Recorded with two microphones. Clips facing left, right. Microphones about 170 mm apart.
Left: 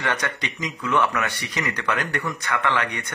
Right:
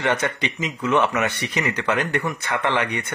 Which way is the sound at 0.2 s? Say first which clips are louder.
Right 4 dB; 20° right (ahead or behind).